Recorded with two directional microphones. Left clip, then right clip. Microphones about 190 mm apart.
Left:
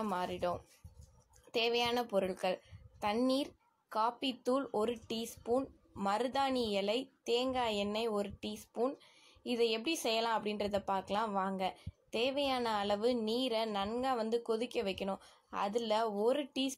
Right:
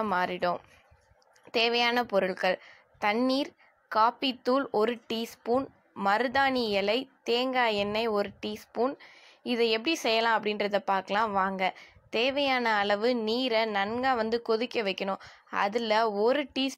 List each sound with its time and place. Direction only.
0.0 s speech: 20° right (ahead or behind)